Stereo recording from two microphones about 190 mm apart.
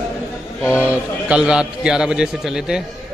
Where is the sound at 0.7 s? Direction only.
5° right (ahead or behind).